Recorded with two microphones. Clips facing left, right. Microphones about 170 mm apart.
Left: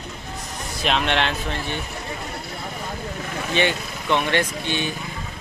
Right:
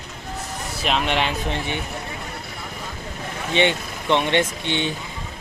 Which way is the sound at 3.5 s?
20° right (ahead or behind).